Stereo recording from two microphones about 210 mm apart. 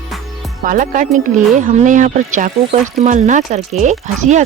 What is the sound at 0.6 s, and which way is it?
Speech, 40° right (ahead or behind).